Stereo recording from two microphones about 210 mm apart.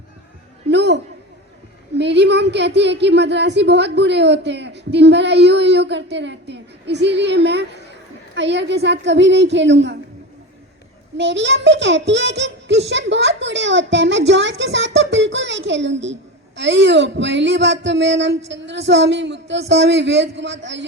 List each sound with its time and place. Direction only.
0.7 s a sound: 55° right (ahead or behind)
2.0 s a woman's voice: 55° right (ahead or behind)
11.2 s a woman's voice: 60° right (ahead or behind)